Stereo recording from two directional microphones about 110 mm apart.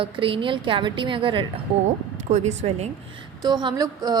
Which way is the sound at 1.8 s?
90° right.